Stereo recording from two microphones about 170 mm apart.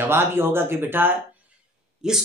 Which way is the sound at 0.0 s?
15° right (ahead or behind).